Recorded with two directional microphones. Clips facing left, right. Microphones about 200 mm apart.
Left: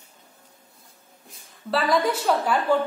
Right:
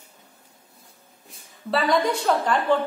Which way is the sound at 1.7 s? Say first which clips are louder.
Right 1 dB; centre (ahead or behind).